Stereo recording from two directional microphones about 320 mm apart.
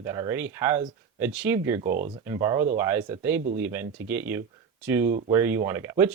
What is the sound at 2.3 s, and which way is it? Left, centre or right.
Speech, centre.